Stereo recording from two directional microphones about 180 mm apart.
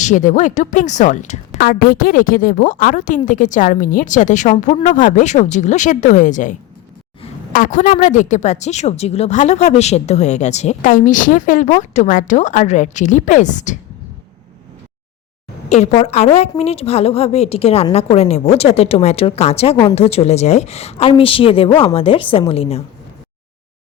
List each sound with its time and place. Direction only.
0.0 s a woman's voice: 45° left (ahead or behind)
15.7 s a woman's voice: 40° left (ahead or behind)